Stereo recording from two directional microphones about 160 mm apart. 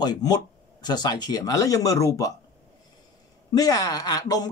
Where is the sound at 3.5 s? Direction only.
25° left (ahead or behind).